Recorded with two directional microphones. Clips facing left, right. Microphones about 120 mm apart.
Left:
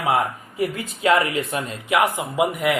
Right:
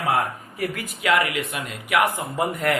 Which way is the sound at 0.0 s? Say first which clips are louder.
Left 2 dB; 25° left (ahead or behind).